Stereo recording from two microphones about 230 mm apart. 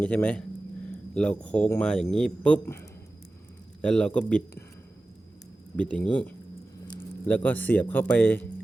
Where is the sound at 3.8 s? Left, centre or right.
Centre.